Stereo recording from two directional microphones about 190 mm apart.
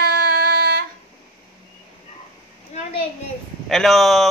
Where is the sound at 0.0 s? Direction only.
55° right (ahead or behind).